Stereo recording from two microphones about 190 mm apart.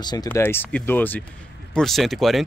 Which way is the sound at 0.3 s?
10° left (ahead or behind).